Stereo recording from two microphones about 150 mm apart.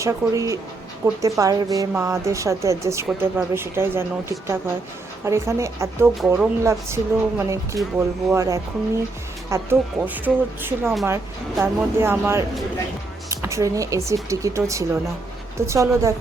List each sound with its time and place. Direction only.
0.0 s speech: 20° right (ahead or behind)